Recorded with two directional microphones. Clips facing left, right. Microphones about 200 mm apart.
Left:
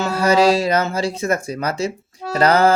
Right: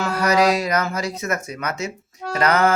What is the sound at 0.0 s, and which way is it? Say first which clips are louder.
Speech: left 3 dB; 30° left (ahead or behind).